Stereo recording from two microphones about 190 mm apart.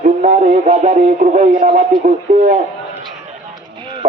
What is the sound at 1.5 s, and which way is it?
Speech, 30° right (ahead or behind).